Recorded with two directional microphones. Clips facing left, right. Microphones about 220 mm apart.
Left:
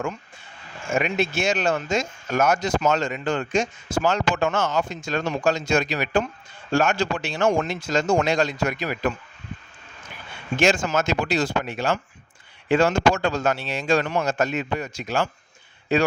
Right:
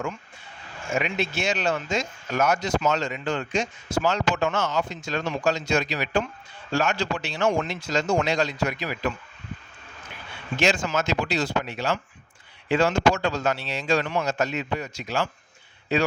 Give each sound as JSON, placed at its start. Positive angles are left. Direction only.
{"t": 0.9, "sound": "speech", "side_deg": 45}
{"t": 10.6, "sound": "speech", "side_deg": 50}